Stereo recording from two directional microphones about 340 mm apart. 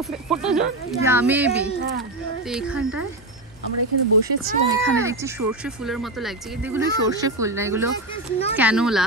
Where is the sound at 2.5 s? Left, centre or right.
Centre.